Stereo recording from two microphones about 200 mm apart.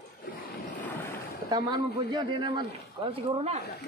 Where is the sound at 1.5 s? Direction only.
20° right (ahead or behind).